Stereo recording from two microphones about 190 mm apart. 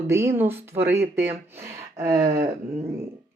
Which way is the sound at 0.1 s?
15° right (ahead or behind).